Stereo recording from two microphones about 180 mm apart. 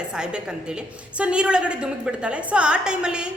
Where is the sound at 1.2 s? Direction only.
5° right (ahead or behind).